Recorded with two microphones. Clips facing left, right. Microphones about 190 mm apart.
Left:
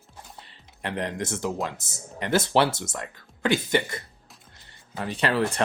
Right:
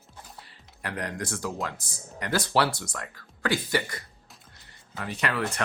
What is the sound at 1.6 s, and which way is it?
Speech, 20° left (ahead or behind).